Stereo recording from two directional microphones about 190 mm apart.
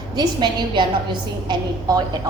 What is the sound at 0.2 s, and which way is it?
A woman's voice, 25° right (ahead or behind).